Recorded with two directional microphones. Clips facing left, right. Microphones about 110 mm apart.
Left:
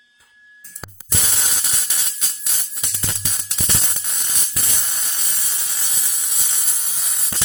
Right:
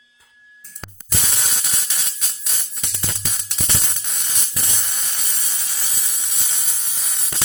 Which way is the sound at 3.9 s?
Centre (ahead or behind).